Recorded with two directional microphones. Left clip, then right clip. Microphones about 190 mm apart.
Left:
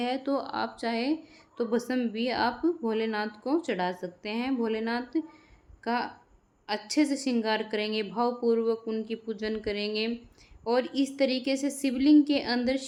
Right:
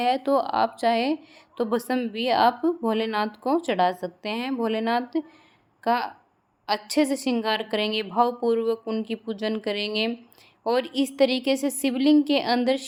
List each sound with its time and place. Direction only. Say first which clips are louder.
0.0 s a woman's voice: right 8 dB; 35° right (ahead or behind)